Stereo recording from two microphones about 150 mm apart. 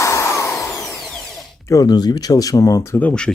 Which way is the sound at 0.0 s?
20° left (ahead or behind).